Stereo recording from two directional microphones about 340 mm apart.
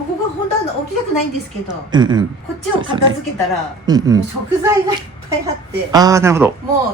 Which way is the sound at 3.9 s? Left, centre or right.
Centre.